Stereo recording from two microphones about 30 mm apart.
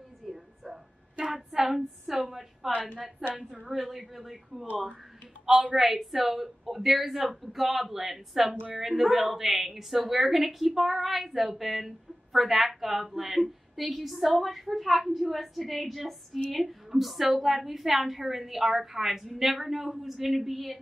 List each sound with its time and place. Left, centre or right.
0.2 s a sound: centre
1.5 s a sound: centre
3.2 s a woman's voice: right
3.6 s a woman's voice: centre
5.5 s speech: right
5.8 s a woman's voice: centre